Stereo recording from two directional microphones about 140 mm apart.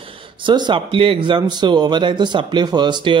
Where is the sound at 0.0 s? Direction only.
40° right (ahead or behind).